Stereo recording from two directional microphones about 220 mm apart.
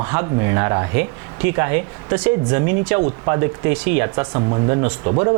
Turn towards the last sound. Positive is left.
turn(degrees=-25)  # may be behind; listen again after turning